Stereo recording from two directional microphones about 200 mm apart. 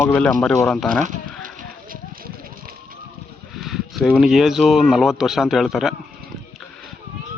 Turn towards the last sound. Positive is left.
turn(degrees=0)  # may be behind; listen again after turning